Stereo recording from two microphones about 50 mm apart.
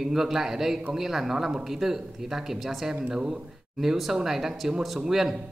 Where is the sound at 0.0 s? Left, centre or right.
Centre.